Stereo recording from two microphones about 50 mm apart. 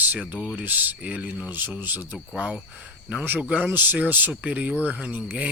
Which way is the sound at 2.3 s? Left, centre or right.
Right.